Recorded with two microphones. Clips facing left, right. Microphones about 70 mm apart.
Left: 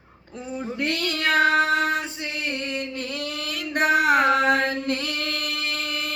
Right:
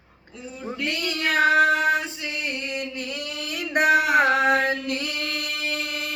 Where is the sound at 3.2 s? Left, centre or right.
Left.